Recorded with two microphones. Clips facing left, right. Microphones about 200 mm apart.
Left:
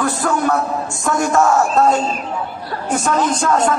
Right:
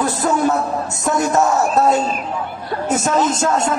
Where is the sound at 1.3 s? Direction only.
20° right (ahead or behind).